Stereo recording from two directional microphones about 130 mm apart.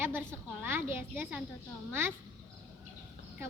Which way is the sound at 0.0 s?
15° right (ahead or behind).